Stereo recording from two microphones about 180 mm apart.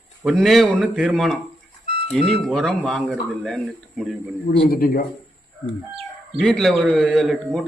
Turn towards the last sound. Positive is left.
turn(degrees=0)  # may be behind; listen again after turning